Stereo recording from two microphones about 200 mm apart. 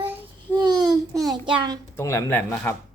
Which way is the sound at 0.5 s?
20° right (ahead or behind).